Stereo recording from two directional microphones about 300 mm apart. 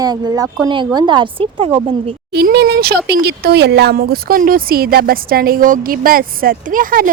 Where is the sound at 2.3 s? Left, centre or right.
Right.